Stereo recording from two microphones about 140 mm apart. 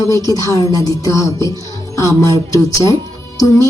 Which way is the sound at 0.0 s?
25° left (ahead or behind).